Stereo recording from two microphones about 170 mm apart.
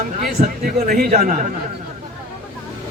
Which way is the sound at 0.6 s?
60° right (ahead or behind).